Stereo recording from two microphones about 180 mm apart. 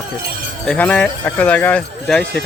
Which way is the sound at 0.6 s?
5° left (ahead or behind).